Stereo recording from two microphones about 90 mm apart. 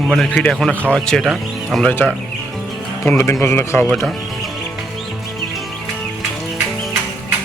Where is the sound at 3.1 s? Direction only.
25° left (ahead or behind).